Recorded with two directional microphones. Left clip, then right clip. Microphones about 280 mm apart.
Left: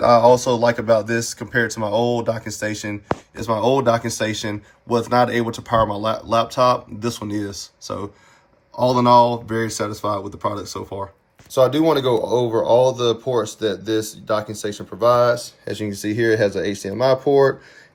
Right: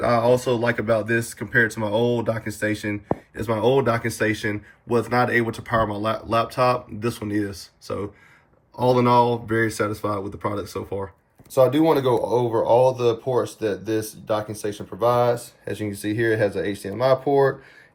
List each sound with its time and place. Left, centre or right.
0.0 s speech: centre
12.0 s speech: left
12.6 s speech: centre
14.4 s speech: centre